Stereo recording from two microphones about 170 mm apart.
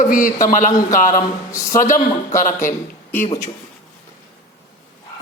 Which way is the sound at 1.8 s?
50° left (ahead or behind).